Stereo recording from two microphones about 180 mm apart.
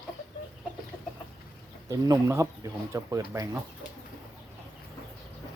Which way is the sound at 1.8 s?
20° right (ahead or behind).